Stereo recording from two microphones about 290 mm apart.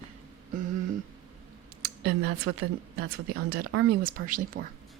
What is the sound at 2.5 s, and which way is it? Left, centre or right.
Speech, right.